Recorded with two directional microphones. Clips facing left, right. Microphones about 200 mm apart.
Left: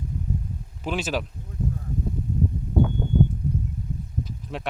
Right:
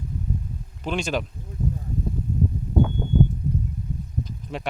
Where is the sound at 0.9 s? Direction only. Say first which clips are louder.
Right 1 dB; 5° left (ahead or behind).